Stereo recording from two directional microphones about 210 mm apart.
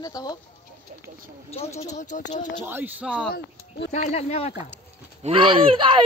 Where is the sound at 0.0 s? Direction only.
20° left (ahead or behind).